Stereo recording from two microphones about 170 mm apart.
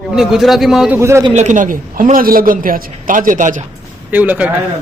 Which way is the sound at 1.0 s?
15° right (ahead or behind).